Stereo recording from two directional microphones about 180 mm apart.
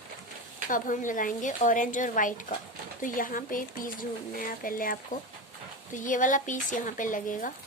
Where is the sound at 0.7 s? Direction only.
45° left (ahead or behind).